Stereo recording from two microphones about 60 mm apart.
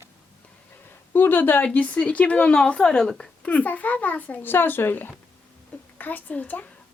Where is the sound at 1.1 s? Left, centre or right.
Left.